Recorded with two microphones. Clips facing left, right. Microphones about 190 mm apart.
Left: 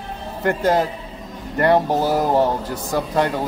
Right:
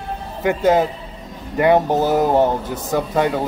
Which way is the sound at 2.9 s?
5° right (ahead or behind).